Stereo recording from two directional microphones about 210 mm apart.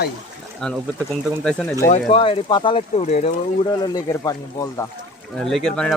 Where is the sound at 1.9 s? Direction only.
25° left (ahead or behind).